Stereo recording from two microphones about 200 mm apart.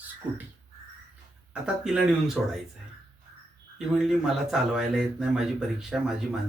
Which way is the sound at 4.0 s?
Centre (ahead or behind).